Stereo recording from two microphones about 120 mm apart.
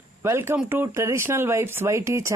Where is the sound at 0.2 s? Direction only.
20° right (ahead or behind).